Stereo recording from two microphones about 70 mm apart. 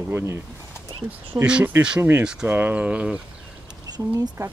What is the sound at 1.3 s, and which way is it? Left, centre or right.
Speech, right.